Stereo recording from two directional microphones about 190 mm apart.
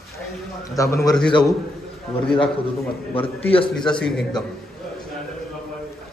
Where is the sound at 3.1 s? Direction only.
30° left (ahead or behind).